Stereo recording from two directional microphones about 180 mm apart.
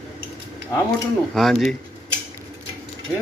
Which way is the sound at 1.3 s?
Centre (ahead or behind).